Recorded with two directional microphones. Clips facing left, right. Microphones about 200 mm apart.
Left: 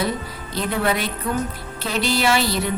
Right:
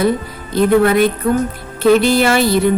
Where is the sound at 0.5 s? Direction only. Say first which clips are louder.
Right 11 dB; 55° right (ahead or behind).